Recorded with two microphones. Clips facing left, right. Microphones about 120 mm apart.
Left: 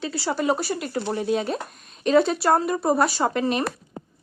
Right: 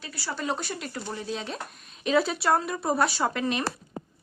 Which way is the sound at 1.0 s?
65° left (ahead or behind).